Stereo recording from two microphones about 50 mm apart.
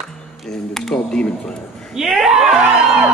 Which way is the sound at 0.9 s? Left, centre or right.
Left.